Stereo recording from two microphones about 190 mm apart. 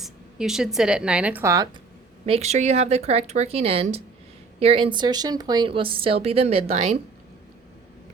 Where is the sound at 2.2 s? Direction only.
35° right (ahead or behind).